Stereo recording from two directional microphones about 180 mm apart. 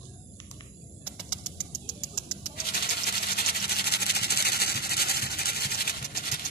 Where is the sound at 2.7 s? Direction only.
60° left (ahead or behind).